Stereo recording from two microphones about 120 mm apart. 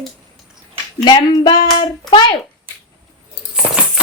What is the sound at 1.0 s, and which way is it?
A child's voice, 35° left (ahead or behind).